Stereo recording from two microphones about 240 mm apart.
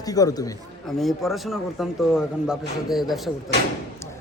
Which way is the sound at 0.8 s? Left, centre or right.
Centre.